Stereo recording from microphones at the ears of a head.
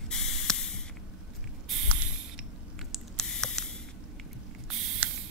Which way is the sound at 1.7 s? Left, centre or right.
Right.